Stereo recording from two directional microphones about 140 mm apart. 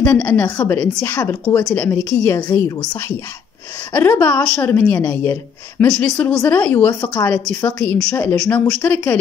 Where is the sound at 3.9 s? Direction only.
15° left (ahead or behind).